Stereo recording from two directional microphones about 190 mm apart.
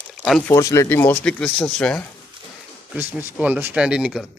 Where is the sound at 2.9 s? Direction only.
5° right (ahead or behind).